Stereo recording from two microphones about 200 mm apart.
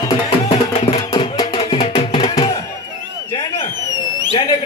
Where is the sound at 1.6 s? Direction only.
30° left (ahead or behind).